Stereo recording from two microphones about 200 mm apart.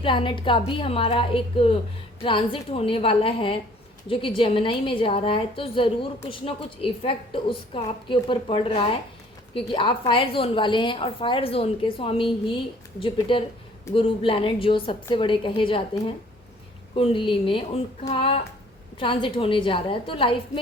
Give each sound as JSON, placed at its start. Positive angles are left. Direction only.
{"t": 0.0, "sound": "a woman's voice", "side_deg": 25}